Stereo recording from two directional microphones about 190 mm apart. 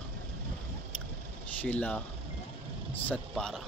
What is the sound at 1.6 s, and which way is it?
Speech, 5° left (ahead or behind).